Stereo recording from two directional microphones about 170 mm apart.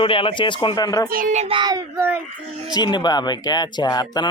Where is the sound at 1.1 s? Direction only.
50° right (ahead or behind).